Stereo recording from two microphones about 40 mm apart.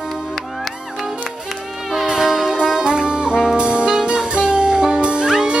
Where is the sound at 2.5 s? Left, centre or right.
Centre.